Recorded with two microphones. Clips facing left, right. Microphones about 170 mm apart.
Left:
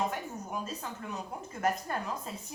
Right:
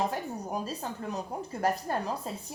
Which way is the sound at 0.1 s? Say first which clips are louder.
Right 4 dB; 35° right (ahead or behind).